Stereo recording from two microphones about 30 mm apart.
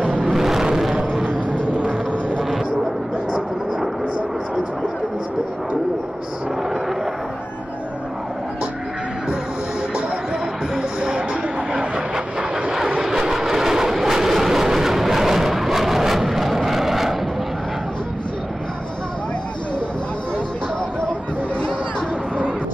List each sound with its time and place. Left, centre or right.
0.3 s vehicle: centre
0.9 s a sound: right
10.8 s music: right
13.3 s vehicle: centre